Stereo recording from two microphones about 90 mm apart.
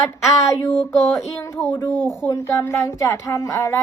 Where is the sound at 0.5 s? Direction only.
30° left (ahead or behind).